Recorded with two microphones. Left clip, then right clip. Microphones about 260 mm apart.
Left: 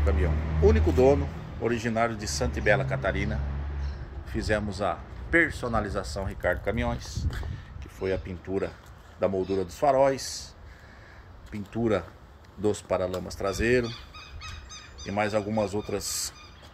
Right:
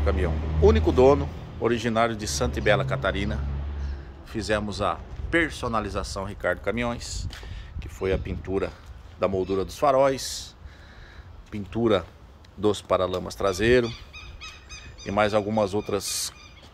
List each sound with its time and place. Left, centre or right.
0.6 s speech: centre
11.5 s speech: centre
16.0 s speech: centre